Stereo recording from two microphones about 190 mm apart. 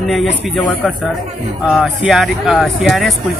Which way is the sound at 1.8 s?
Centre (ahead or behind).